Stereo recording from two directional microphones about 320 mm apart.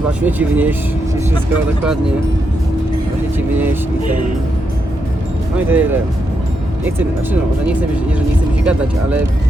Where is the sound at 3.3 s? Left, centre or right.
Centre.